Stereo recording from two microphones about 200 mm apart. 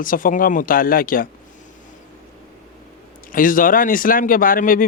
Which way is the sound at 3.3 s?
45° left (ahead or behind).